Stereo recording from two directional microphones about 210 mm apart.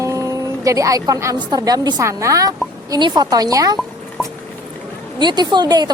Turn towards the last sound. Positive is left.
turn(degrees=-20)  # may be behind; listen again after turning